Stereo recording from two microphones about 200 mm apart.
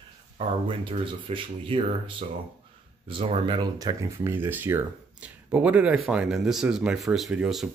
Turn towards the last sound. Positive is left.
turn(degrees=-5)  # may be behind; listen again after turning